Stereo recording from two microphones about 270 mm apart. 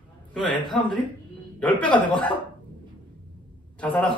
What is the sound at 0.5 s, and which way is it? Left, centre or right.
Speech, centre.